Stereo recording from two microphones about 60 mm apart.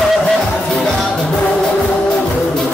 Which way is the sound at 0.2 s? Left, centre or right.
Centre.